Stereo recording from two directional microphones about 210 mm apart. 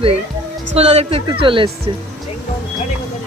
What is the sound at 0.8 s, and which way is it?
Speech, 30° right (ahead or behind).